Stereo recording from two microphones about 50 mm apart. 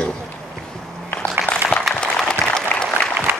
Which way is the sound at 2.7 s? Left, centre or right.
Left.